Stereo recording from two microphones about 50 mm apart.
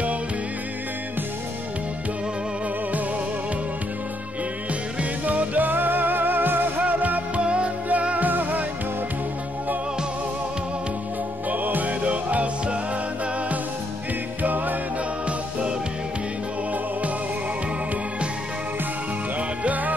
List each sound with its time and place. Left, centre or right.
5.2 s music: right
11.5 s music: right
14.4 s music: right
19.6 s music: right